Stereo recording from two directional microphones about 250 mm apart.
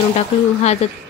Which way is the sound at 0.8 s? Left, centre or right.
Left.